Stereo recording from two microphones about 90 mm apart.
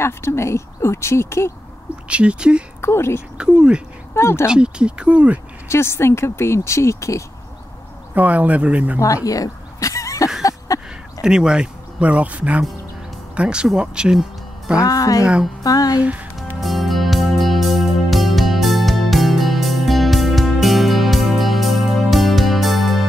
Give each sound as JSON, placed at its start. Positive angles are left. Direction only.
{"t": 0.0, "sound": "speech", "side_deg": 30}
{"t": 2.0, "sound": "speech", "side_deg": -15}
{"t": 2.8, "sound": "speech", "side_deg": 30}
{"t": 3.3, "sound": "speech", "side_deg": -10}
{"t": 4.1, "sound": "speech", "side_deg": 30}
{"t": 4.5, "sound": "speech", "side_deg": -10}
{"t": 5.7, "sound": "speech", "side_deg": 30}
{"t": 8.1, "sound": "speech", "side_deg": -15}
{"t": 9.0, "sound": "a sound", "side_deg": 40}
{"t": 11.2, "sound": "speech", "side_deg": -10}
{"t": 14.8, "sound": "speech", "side_deg": 40}
{"t": 15.6, "sound": "music", "side_deg": 45}
{"t": 16.6, "sound": "music", "side_deg": 0}